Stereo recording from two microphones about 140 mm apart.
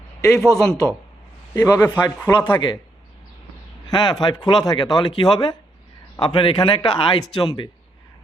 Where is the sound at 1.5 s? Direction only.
25° left (ahead or behind).